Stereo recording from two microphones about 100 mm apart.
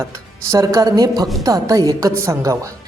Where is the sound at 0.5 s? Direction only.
35° right (ahead or behind).